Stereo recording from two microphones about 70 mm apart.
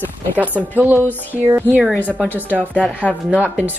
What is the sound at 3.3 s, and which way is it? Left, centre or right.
Speech, right.